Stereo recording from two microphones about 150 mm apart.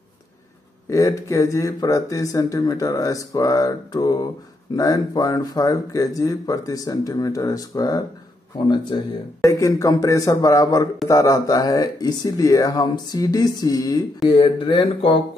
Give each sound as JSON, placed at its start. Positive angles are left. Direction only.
{"t": 0.8, "sound": "speech", "side_deg": 20}